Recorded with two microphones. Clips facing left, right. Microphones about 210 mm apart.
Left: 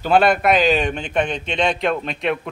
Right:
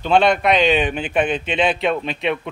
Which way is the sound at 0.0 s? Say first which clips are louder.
Even; 5° left (ahead or behind).